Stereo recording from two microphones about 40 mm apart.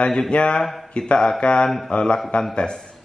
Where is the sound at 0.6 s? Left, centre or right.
Centre.